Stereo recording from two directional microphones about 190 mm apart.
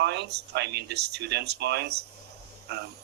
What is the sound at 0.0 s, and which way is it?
Speech, 65° right (ahead or behind).